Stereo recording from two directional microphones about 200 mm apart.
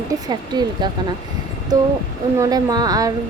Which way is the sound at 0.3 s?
20° right (ahead or behind).